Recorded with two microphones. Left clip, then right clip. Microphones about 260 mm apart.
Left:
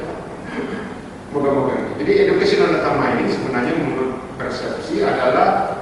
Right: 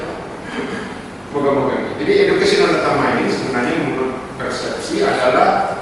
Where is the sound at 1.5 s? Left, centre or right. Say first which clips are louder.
Right 2 dB; centre.